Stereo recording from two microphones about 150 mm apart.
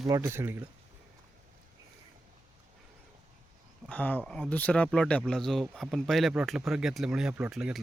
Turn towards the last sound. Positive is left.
turn(degrees=-5)  # may be behind; listen again after turning